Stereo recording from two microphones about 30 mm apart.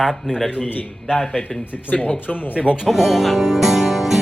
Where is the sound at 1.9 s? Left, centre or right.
Left.